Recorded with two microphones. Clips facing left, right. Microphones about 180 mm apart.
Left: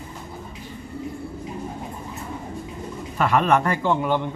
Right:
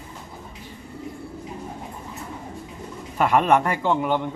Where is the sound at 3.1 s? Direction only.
20° right (ahead or behind).